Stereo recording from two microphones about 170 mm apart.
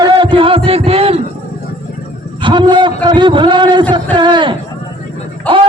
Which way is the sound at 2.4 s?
25° right (ahead or behind).